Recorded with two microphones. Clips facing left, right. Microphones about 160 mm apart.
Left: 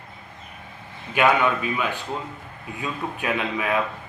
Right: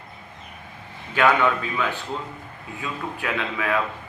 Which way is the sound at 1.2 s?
15° left (ahead or behind).